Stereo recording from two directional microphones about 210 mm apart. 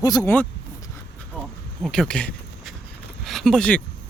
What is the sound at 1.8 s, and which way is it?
Speech, 5° left (ahead or behind).